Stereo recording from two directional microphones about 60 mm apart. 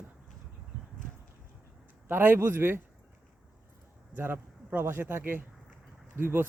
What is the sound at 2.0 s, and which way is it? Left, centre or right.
Speech, right.